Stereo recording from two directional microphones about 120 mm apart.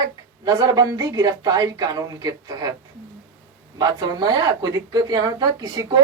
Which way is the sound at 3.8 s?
35° right (ahead or behind).